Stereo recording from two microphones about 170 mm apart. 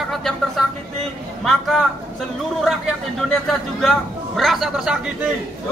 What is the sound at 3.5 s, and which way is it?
A man's voice, centre (ahead or behind).